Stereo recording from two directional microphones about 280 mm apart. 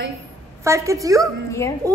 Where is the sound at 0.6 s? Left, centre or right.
Centre.